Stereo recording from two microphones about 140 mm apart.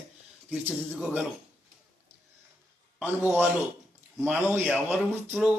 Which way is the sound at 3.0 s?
15° right (ahead or behind).